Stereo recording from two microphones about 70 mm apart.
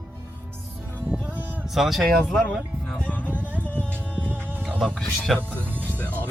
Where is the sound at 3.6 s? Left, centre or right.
Centre.